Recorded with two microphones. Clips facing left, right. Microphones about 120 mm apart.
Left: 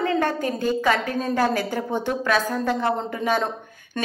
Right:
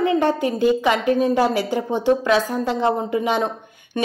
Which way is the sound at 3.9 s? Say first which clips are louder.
Right 6 dB; 10° right (ahead or behind).